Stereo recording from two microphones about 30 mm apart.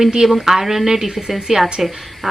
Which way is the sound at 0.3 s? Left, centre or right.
Centre.